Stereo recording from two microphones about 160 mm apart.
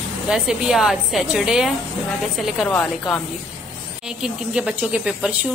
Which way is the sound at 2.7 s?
10° left (ahead or behind).